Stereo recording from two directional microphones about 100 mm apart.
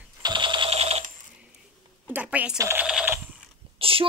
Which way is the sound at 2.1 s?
15° right (ahead or behind).